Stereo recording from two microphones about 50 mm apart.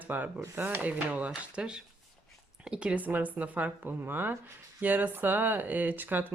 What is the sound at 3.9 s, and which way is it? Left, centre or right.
Speech, right.